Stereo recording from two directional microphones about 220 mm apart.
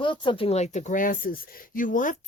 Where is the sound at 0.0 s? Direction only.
20° left (ahead or behind).